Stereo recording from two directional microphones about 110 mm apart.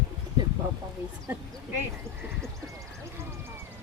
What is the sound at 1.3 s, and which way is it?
Speech, 20° right (ahead or behind).